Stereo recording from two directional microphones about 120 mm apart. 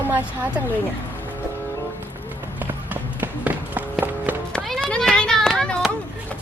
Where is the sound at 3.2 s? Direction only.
15° right (ahead or behind).